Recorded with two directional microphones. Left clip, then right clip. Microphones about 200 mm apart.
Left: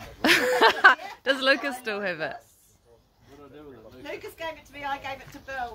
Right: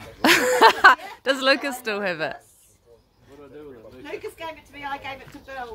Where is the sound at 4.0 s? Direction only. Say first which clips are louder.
Right 2 dB; 20° left (ahead or behind).